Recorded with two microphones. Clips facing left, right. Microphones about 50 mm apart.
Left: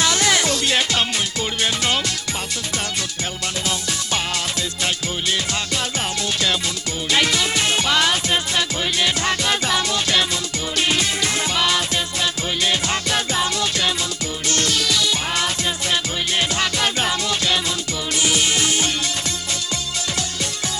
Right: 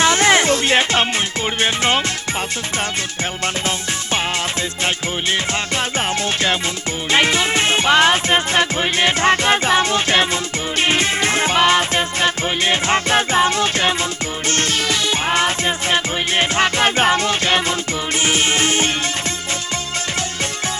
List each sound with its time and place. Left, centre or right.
0.0 s music: right
7.1 s music: right